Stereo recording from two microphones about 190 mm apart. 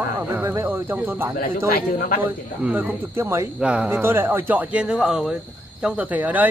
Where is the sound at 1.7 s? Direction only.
50° left (ahead or behind).